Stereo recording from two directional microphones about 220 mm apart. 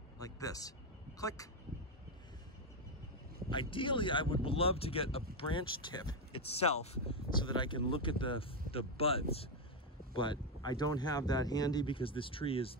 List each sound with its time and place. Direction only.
0.2 s a sound: 15° left (ahead or behind)
1.2 s speech: 15° left (ahead or behind)
3.4 s speech: 20° left (ahead or behind)